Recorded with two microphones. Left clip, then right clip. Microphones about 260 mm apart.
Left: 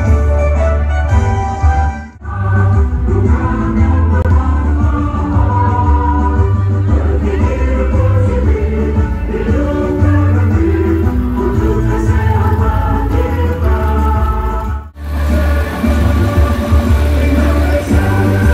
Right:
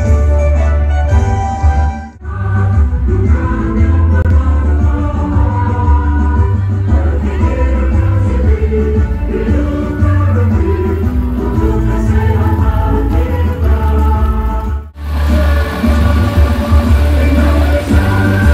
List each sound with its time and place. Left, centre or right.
15.8 s music: right